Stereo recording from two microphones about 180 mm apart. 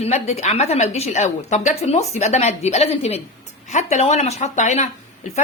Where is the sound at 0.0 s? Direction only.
35° left (ahead or behind).